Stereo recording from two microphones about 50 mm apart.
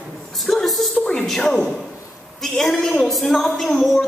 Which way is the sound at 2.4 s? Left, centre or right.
Centre.